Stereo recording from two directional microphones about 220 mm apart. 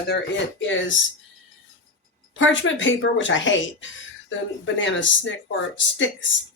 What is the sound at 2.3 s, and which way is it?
Speech, 60° left (ahead or behind).